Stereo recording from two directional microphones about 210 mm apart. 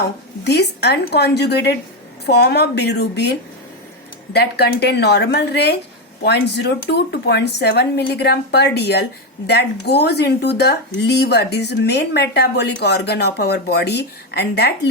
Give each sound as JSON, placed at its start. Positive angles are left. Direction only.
{"t": 0.0, "sound": "speech", "side_deg": 55}